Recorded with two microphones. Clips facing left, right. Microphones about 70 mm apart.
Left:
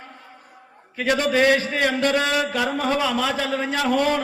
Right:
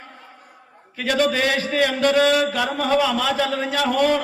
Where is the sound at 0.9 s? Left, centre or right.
Left.